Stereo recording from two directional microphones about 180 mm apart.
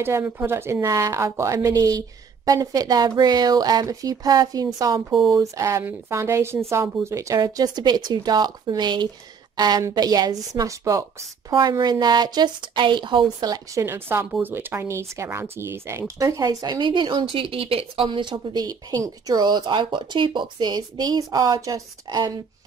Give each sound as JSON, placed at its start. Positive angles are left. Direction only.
{"t": 0.0, "sound": "speech", "side_deg": -15}